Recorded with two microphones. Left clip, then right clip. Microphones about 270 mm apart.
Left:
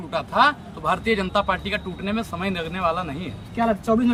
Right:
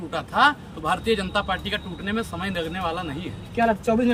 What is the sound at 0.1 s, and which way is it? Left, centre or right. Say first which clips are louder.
A man's voice: left 1 dB; centre.